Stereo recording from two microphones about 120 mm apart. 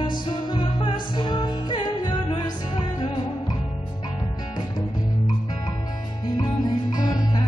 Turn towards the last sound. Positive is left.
turn(degrees=35)  # may be behind; listen again after turning